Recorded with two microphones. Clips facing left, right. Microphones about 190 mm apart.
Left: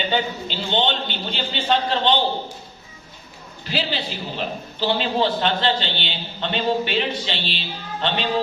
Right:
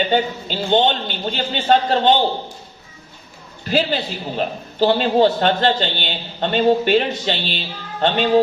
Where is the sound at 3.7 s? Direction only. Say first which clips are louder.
Right 6 dB; 45° right (ahead or behind).